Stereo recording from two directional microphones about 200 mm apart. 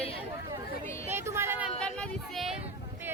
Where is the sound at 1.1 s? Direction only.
10° right (ahead or behind).